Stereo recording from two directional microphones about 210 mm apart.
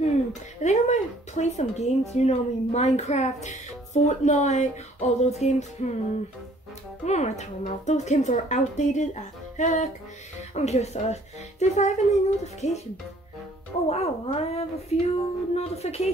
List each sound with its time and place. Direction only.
0.0 s speech: 35° left (ahead or behind)
7.1 s speech: 35° left (ahead or behind)
13.8 s speech: 30° left (ahead or behind)